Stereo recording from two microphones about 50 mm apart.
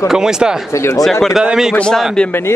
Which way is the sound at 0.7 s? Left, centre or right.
Left.